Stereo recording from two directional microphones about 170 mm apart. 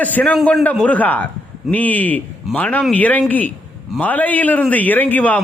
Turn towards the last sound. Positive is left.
turn(degrees=10)  # may be behind; listen again after turning